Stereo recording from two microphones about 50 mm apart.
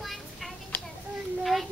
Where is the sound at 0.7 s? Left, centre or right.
Left.